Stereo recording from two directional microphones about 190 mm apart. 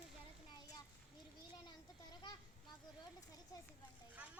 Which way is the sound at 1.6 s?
20° left (ahead or behind).